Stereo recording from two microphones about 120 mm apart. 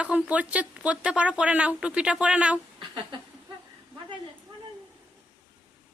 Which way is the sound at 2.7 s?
40° right (ahead or behind).